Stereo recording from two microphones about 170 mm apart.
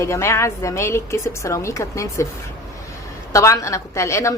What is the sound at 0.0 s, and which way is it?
A woman's voice, 15° left (ahead or behind).